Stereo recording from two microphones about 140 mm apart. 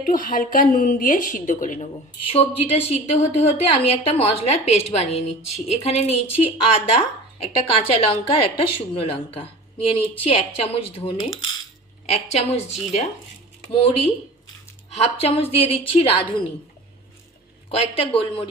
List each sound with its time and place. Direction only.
0.0 s a woman's voice: 80° left
2.2 s a woman's voice: 45° left (ahead or behind)
14.8 s a woman's voice: 50° left (ahead or behind)
17.7 s speech: 45° left (ahead or behind)